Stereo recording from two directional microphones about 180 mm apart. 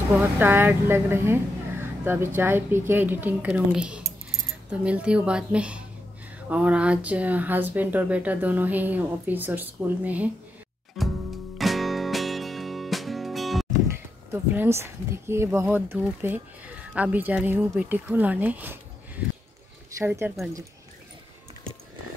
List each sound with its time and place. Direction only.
0.4 s speech: 10° right (ahead or behind)
11.0 s music: centre (ahead or behind)
13.8 s speech: 15° right (ahead or behind)
20.0 s speech: 10° right (ahead or behind)